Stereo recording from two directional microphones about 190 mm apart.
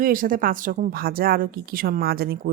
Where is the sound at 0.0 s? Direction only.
45° right (ahead or behind).